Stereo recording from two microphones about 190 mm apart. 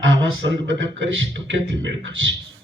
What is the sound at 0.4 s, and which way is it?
A man's voice, 75° right (ahead or behind).